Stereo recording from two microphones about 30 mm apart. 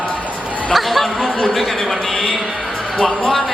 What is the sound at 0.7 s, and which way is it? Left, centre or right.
Chatter, centre.